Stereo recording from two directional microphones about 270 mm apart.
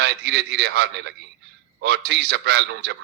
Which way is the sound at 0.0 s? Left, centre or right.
Right.